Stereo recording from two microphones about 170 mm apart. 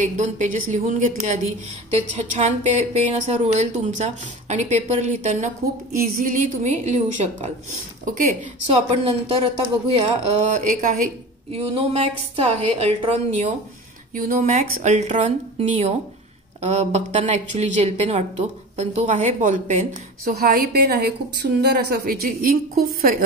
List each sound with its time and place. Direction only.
0.0 s speech: 45° right (ahead or behind)
5.9 s speech: 55° right (ahead or behind)
9.0 s speech: 35° right (ahead or behind); by 11.1 s 50° right (ahead or behind)
11.5 s a woman's voice: 35° right (ahead or behind)
14.1 s speech: 50° right (ahead or behind)
20.2 s a woman's voice: 55° right (ahead or behind)